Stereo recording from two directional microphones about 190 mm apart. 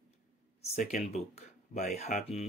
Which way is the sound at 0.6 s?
35° left (ahead or behind).